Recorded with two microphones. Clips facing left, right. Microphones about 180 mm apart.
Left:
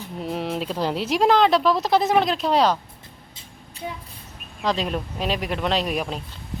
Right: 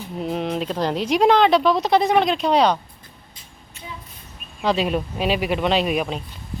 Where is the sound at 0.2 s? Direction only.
Centre (ahead or behind).